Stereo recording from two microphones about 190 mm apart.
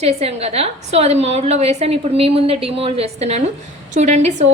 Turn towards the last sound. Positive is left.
turn(degrees=-35)  # may be behind; listen again after turning